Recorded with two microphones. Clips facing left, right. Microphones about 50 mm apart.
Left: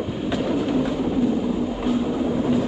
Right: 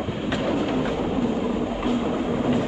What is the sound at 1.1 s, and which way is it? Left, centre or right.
Train, centre.